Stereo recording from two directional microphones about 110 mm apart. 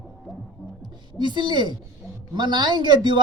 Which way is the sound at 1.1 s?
45° right (ahead or behind).